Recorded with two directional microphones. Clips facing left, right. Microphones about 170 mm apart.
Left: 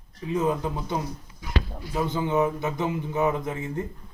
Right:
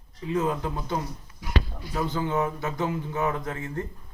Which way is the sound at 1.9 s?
15° left (ahead or behind).